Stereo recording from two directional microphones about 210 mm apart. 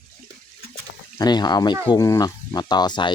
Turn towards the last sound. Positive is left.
turn(degrees=20)  # may be behind; listen again after turning